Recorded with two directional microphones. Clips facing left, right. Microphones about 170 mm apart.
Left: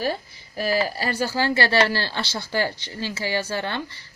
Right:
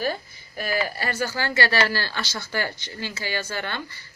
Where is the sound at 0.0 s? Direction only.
35° left (ahead or behind).